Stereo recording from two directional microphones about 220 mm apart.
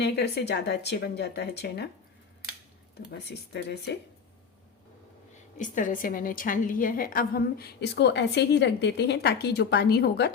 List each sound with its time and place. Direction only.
0.0 s a woman's voice: 50° left (ahead or behind)
3.1 s a woman's voice: 50° left (ahead or behind)
5.5 s a woman's voice: 35° left (ahead or behind)